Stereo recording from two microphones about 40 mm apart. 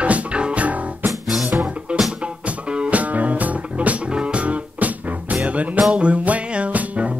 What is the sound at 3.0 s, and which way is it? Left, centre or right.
Music, right.